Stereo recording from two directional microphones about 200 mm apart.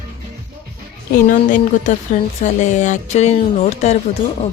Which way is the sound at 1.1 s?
40° left (ahead or behind).